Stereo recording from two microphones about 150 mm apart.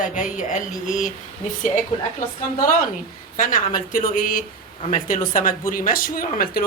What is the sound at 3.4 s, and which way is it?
Speech, 70° left (ahead or behind).